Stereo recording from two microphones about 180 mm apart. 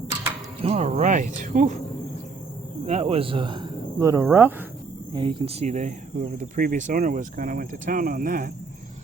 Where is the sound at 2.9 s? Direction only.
35° right (ahead or behind); by 4.7 s 10° right (ahead or behind).